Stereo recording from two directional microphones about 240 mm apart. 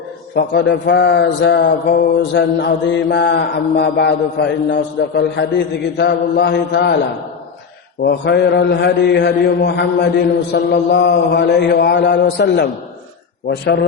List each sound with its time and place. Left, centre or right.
0.3 s mantra: left
8.0 s mantra: left